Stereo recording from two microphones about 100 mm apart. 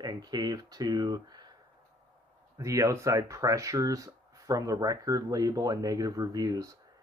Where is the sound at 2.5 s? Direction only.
35° right (ahead or behind).